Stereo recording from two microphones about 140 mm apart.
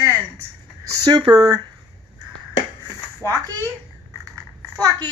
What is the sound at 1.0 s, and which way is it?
Speech, 35° right (ahead or behind).